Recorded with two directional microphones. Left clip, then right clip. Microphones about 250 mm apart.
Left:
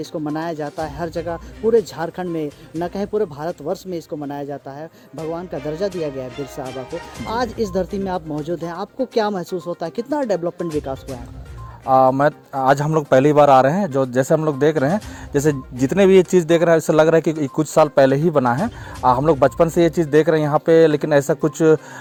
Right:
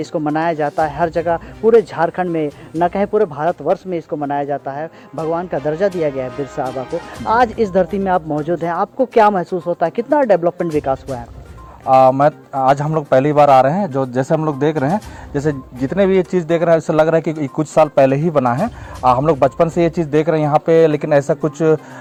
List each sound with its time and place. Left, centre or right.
0.0 s speech: left
11.9 s speech: left